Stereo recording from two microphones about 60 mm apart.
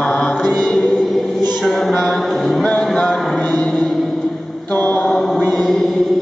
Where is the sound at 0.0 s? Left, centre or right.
Centre.